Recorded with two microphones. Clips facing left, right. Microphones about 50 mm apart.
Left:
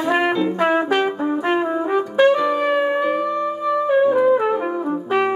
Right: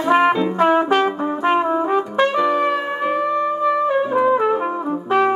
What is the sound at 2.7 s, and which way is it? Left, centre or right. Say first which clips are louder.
Music: left 4 dB; centre.